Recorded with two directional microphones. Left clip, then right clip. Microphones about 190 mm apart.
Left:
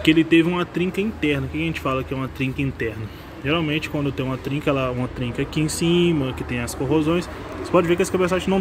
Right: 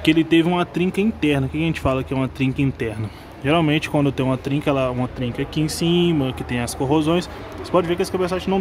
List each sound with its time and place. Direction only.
0.0 s speech: 20° right (ahead or behind)
7.7 s speech: 5° right (ahead or behind)